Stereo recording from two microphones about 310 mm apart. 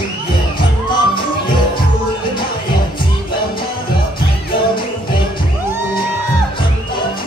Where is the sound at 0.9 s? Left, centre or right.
Centre.